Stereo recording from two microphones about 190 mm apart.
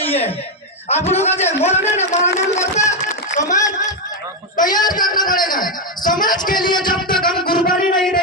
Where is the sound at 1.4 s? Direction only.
35° left (ahead or behind).